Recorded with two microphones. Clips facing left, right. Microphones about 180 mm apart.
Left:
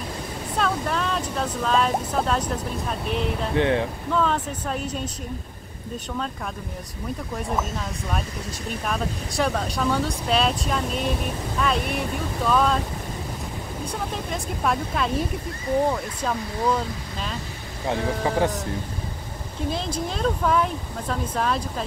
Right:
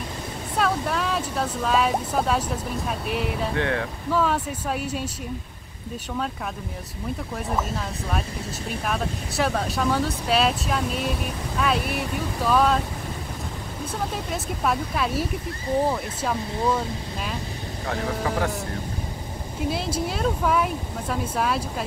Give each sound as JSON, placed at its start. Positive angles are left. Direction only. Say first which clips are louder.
{"t": 0.6, "sound": "speech", "louder": "right 1 dB", "side_deg": -5}
{"t": 3.5, "sound": "speech", "louder": "left 8 dB", "side_deg": 20}
{"t": 4.1, "sound": "speech", "louder": "right 1 dB", "side_deg": -5}
{"t": 7.3, "sound": "speech", "louder": "even", "side_deg": 0}
{"t": 14.3, "sound": "speech", "louder": "left 1 dB", "side_deg": -5}
{"t": 17.8, "sound": "speech", "louder": "left 3 dB", "side_deg": 20}
{"t": 19.7, "sound": "speech", "louder": "right 1 dB", "side_deg": -5}